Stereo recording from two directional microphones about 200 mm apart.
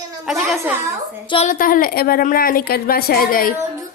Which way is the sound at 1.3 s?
35° left (ahead or behind).